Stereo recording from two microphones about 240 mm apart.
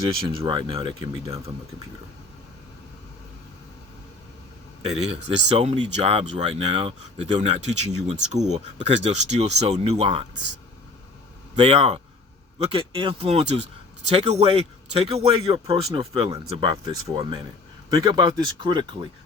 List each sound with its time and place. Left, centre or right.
0.3 s speech: right
4.8 s speech: right
11.5 s speech: right